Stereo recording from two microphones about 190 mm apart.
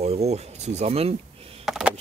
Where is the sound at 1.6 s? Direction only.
Centre (ahead or behind).